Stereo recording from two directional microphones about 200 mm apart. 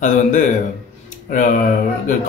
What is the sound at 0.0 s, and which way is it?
Speech, 40° left (ahead or behind).